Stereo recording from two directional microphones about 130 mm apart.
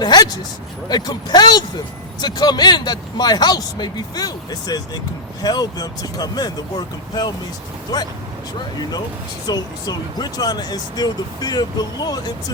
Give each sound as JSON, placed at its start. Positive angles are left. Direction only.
{"t": 0.0, "sound": "a sound", "side_deg": 30}
{"t": 0.9, "sound": "speech", "side_deg": 30}
{"t": 9.5, "sound": "speech", "side_deg": 30}